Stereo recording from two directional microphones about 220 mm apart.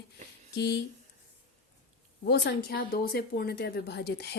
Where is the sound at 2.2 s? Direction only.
45° left (ahead or behind).